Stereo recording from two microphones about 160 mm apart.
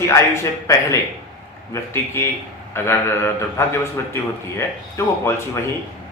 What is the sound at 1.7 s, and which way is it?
A man's voice, 15° left (ahead or behind).